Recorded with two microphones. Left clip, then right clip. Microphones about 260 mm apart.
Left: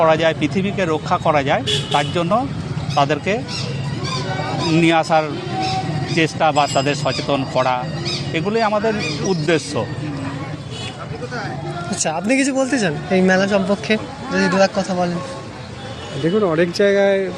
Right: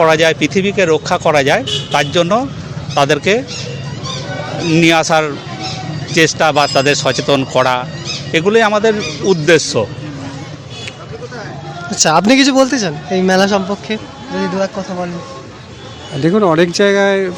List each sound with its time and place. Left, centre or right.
0.0 s speech: right
4.7 s speech: right
11.9 s speech: right
12.7 s speech: centre
13.3 s speech: right
13.7 s speech: centre
16.2 s speech: right